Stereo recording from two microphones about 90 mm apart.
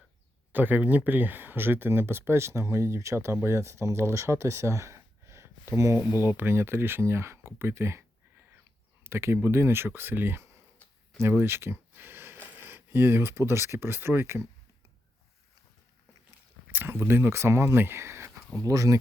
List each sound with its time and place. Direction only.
0.5 s speech: 20° right (ahead or behind)
16.6 s speech: 25° right (ahead or behind); by 18.9 s 40° right (ahead or behind)